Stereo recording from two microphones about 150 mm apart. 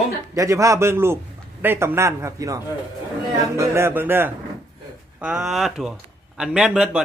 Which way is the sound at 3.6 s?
15° right (ahead or behind).